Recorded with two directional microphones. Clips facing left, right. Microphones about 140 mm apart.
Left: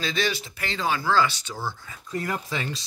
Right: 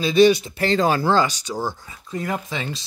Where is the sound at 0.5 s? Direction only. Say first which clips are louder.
Right 12 dB; 30° right (ahead or behind).